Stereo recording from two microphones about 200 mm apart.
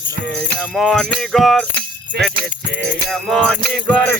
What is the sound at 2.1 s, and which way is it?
Music, 55° right (ahead or behind).